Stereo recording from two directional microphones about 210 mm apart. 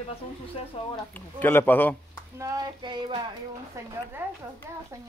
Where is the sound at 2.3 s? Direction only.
15° right (ahead or behind).